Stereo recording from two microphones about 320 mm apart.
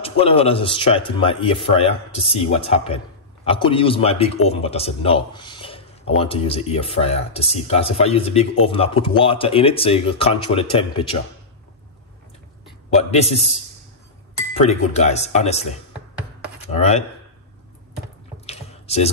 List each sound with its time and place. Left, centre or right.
0.2 s speech: centre
12.9 s speech: centre
14.6 s speech: centre
16.7 s speech: centre
18.5 s drip: centre